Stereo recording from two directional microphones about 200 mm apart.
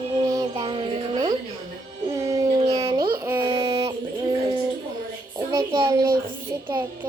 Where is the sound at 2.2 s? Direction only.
20° right (ahead or behind).